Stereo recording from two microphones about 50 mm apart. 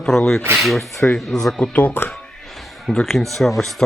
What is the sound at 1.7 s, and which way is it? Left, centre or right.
Speech, left.